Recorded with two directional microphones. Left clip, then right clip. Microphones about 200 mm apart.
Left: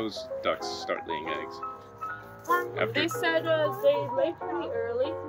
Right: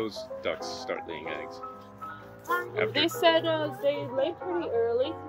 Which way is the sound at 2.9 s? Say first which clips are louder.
Right 7 dB; 35° right (ahead or behind).